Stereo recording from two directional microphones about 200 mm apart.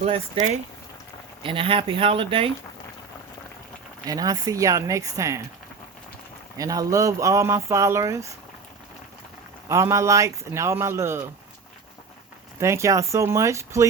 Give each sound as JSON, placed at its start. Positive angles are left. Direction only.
{"t": 0.0, "sound": "speech", "side_deg": -30}
{"t": 4.0, "sound": "speech", "side_deg": -20}
{"t": 6.6, "sound": "speech", "side_deg": -15}
{"t": 9.6, "sound": "speech", "side_deg": -15}
{"t": 12.5, "sound": "speech", "side_deg": -15}